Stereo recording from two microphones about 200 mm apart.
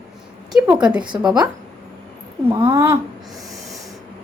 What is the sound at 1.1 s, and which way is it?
Speech, 15° right (ahead or behind).